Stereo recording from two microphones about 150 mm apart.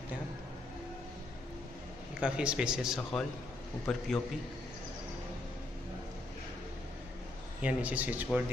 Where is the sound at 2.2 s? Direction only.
5° right (ahead or behind).